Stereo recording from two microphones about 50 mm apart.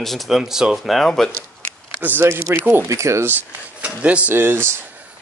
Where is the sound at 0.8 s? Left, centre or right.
Centre.